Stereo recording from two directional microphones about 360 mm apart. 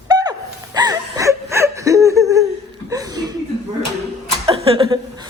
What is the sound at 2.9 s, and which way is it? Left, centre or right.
Chuckle, centre.